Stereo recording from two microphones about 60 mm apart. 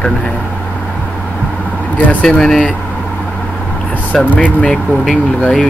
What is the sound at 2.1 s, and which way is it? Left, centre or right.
Speech, left.